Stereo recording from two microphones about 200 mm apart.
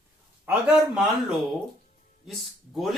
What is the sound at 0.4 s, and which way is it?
A man's voice, centre (ahead or behind).